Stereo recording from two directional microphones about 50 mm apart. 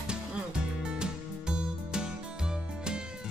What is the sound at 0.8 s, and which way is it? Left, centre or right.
Music, centre.